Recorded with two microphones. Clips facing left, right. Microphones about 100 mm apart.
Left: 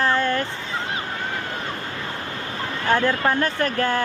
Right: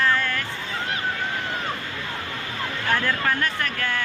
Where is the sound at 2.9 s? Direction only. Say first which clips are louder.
Left 4 dB; 30° left (ahead or behind).